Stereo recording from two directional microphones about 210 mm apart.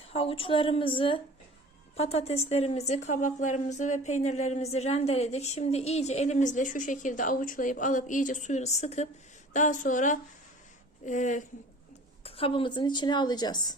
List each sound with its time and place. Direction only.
0.0 s speech: 25° left (ahead or behind)
12.2 s speech: 25° left (ahead or behind)